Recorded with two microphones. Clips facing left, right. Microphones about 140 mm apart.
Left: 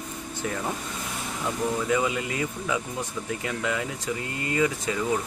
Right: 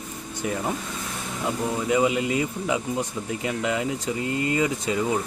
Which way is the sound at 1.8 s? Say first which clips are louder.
Right 4 dB; 20° right (ahead or behind).